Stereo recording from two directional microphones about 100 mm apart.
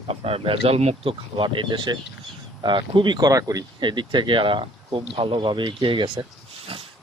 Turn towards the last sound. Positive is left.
turn(degrees=-65)  # may be behind; listen again after turning